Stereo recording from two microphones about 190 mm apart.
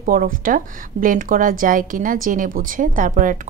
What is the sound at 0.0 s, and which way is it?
A woman's voice, 45° right (ahead or behind).